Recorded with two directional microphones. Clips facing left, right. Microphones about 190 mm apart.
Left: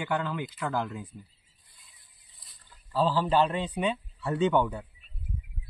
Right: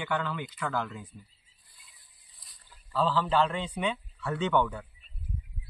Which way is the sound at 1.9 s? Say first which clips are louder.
Left 1 dB; centre (ahead or behind).